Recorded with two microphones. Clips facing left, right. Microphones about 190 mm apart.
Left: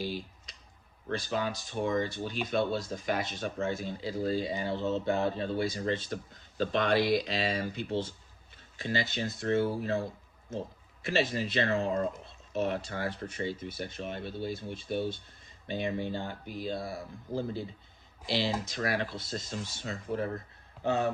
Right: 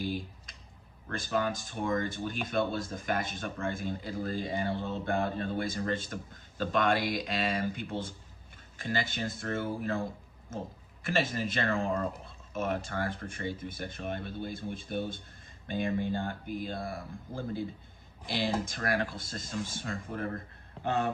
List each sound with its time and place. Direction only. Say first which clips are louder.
0.0 s clicking: right 1 dB; 50° right (ahead or behind)
1.1 s speech: right 1 dB; 50° right (ahead or behind)
11.0 s speech: left 1 dB; 50° right (ahead or behind)